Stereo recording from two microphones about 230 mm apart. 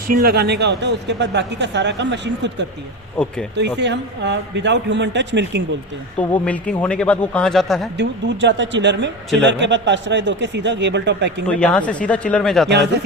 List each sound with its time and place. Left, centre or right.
0.1 s speech: right
3.2 s speech: centre
3.5 s speech: right
6.1 s speech: centre
7.9 s speech: right
11.4 s speech: centre
12.6 s speech: right